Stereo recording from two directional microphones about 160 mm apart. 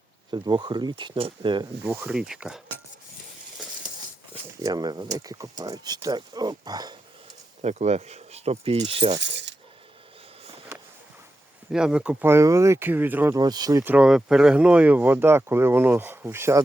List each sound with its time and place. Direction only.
0.3 s speech: 25° right (ahead or behind)
1.8 s speech: 10° right (ahead or behind)
4.6 s speech: 25° right (ahead or behind)
7.6 s speech: 45° right (ahead or behind)
9.2 s speech: 90° right
11.7 s speech: 5° right (ahead or behind)
13.3 s speech: 25° right (ahead or behind)
13.9 s speech: 5° right (ahead or behind)